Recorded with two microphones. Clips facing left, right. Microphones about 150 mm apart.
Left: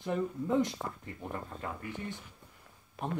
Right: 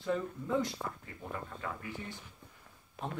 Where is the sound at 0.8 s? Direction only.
25° left (ahead or behind).